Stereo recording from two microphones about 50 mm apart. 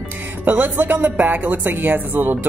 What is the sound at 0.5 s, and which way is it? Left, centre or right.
Speech, right.